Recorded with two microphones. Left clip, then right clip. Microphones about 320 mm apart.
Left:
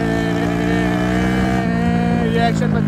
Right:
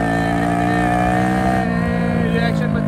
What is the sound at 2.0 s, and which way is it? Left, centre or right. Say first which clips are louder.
Music: left 2 dB; centre.